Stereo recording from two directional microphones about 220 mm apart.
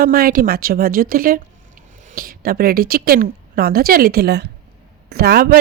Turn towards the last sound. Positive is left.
turn(degrees=-45)  # may be behind; listen again after turning